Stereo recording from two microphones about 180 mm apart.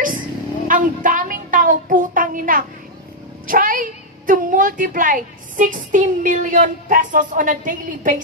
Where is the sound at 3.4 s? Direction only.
50° right (ahead or behind).